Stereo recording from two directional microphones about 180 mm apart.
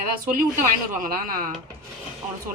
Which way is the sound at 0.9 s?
50° right (ahead or behind).